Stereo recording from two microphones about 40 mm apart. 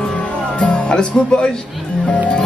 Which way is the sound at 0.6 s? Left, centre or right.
Left.